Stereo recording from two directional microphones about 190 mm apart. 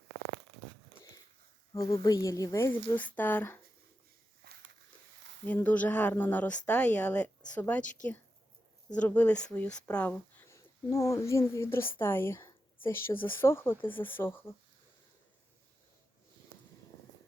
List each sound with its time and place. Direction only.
1.7 s speech: 20° left (ahead or behind)
4.4 s a sound: 55° right (ahead or behind)
5.5 s speech: 10° left (ahead or behind)
9.0 s speech: 5° left (ahead or behind)